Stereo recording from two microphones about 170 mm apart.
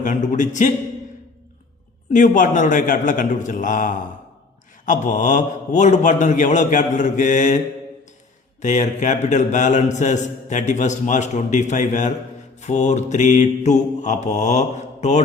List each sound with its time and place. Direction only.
0.0 s a man's voice: 50° left (ahead or behind)
2.0 s a man's voice: 45° left (ahead or behind)
8.6 s a man's voice: 45° left (ahead or behind)